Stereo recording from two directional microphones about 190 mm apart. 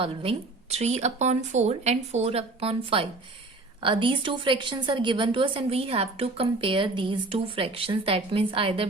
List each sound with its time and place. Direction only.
0.0 s a woman's voice: 30° right (ahead or behind)